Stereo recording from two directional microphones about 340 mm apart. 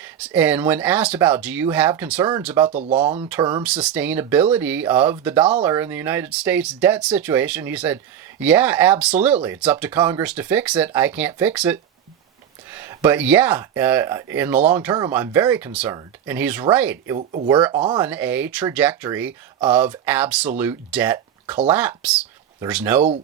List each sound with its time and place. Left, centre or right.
0.0 s speech: centre
17.2 s speech: right
17.5 s speech: centre